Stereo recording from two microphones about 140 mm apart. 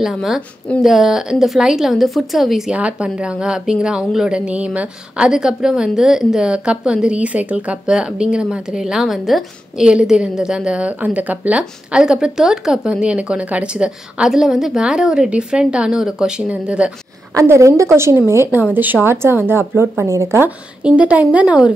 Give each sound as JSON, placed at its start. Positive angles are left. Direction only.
{"t": 0.0, "sound": "speech", "side_deg": 0}
{"t": 17.3, "sound": "a woman's voice", "side_deg": -20}